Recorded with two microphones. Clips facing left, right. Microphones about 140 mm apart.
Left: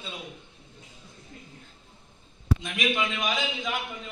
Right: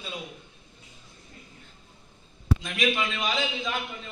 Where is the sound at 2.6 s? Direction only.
15° left (ahead or behind).